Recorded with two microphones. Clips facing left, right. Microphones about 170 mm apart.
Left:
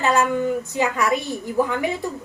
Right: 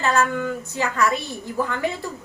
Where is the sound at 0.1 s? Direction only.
15° left (ahead or behind).